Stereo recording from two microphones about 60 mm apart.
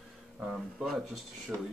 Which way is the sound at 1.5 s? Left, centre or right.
Right.